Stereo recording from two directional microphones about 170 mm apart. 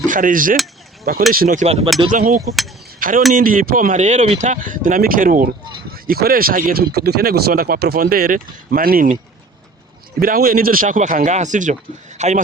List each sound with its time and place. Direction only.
0.1 s mechanisms: 55° right (ahead or behind)
1.3 s speech: 55° right (ahead or behind)
1.6 s speech: 40° right (ahead or behind)
2.0 s speech: 50° right (ahead or behind)
10.2 s speech: 60° right (ahead or behind); by 12.4 s 45° right (ahead or behind)